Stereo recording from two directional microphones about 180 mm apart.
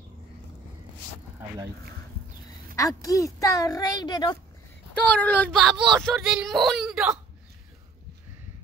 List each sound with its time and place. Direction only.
2.7 s speech: 20° left (ahead or behind)
5.0 s speech: 10° left (ahead or behind)